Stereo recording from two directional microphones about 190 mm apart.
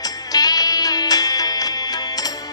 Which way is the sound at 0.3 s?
20° left (ahead or behind).